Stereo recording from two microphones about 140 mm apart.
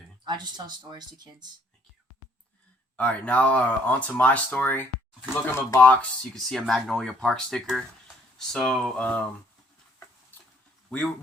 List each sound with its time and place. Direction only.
0.3 s speech: 30° right (ahead or behind)
2.9 s speech: 10° left (ahead or behind)
10.8 s speech: 10° left (ahead or behind)